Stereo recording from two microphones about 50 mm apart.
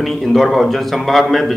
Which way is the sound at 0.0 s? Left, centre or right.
Centre.